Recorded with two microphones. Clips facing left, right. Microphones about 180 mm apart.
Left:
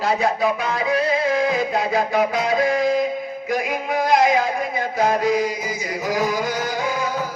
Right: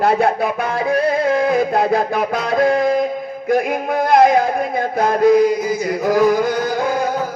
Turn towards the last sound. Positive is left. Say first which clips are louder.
# right 5 dB
turn(degrees=-55)  # may be behind; listen again after turning